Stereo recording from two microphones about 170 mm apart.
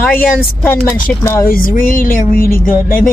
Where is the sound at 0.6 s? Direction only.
10° left (ahead or behind).